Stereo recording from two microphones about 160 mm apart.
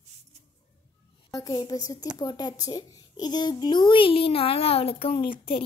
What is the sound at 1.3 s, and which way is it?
A woman's voice, 25° left (ahead or behind).